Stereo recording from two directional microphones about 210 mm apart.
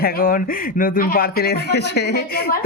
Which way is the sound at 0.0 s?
45° left (ahead or behind).